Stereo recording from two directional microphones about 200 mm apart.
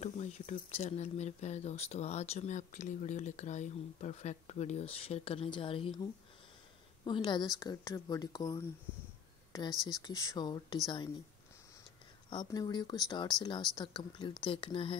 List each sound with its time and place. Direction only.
0.0 s speech: 35° left (ahead or behind)
7.1 s a woman's voice: 20° left (ahead or behind)
12.3 s a woman's voice: 20° left (ahead or behind)